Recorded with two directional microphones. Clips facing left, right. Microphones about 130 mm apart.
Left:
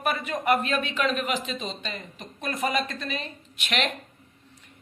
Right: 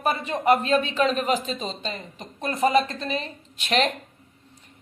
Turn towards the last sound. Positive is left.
turn(degrees=-35)  # may be behind; listen again after turning